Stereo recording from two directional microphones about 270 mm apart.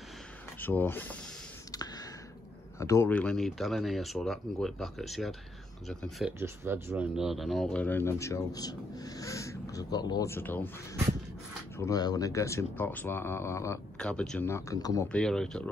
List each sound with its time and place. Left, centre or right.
0.6 s speech: centre
2.8 s speech: centre
11.8 s speech: centre
15.1 s speech: centre